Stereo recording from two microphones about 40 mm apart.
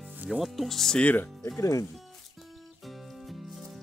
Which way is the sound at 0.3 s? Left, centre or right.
Centre.